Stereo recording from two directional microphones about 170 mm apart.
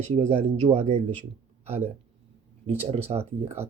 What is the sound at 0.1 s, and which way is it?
Speech, 45° right (ahead or behind).